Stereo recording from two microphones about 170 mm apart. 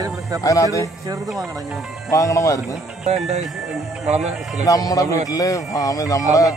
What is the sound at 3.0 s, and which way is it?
Speech, 40° right (ahead or behind).